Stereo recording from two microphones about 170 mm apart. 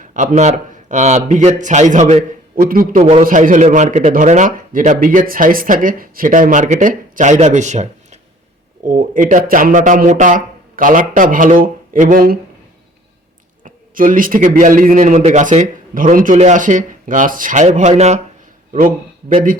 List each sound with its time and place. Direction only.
0.0 s a man's voice: 50° right (ahead or behind)
2.6 s a man's voice: 55° right (ahead or behind)
3.0 s a man's voice: 40° right (ahead or behind)
3.2 s speech: 50° right (ahead or behind)
13.7 s speech: 50° right (ahead or behind)
18.7 s speech: 55° right (ahead or behind)